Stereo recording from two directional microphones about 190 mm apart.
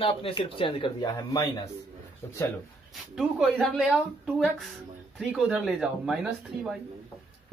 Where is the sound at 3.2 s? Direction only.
5° right (ahead or behind).